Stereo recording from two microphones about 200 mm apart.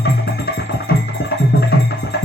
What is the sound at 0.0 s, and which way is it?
Music, 50° left (ahead or behind).